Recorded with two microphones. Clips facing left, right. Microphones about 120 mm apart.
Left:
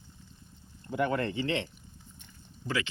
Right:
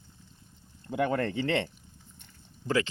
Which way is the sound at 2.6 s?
40° right (ahead or behind).